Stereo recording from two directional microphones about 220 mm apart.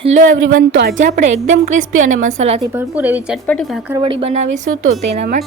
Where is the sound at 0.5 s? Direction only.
60° right (ahead or behind).